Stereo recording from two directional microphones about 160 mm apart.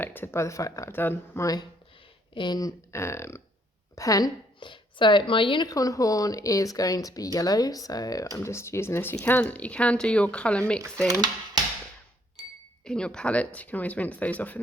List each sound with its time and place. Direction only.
0.0 s a woman's voice: 10° left (ahead or behind)
11.1 s speech: 25° right (ahead or behind)
12.8 s speech: 5° left (ahead or behind)